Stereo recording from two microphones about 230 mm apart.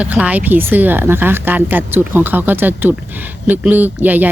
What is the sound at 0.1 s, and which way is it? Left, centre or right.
Speech, centre.